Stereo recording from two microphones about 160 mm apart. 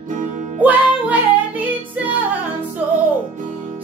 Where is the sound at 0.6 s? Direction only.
10° right (ahead or behind).